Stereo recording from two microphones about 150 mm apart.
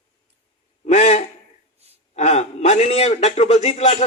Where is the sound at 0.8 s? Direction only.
45° left (ahead or behind).